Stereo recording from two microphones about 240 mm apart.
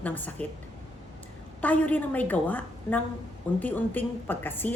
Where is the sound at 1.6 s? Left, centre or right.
Centre.